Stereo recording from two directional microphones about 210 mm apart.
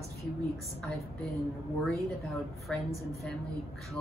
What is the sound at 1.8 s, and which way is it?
Speech, centre (ahead or behind).